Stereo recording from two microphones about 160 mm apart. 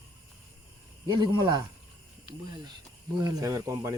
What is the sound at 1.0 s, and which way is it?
Speech, 30° right (ahead or behind).